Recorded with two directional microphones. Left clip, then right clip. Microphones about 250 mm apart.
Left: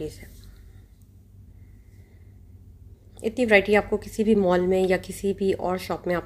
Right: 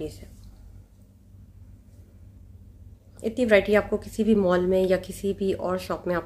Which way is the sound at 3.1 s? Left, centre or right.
Centre.